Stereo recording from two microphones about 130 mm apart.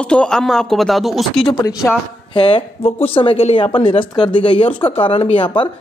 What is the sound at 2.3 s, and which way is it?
Speech, 45° left (ahead or behind).